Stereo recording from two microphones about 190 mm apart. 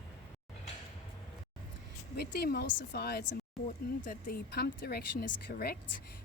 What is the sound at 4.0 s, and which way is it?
Speech, 45° left (ahead or behind).